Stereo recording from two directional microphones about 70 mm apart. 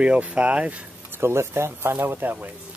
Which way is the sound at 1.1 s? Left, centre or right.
Right.